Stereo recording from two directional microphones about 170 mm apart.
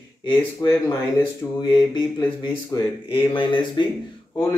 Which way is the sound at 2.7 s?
20° left (ahead or behind).